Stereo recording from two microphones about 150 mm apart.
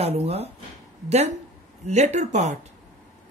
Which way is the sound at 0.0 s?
45° right (ahead or behind).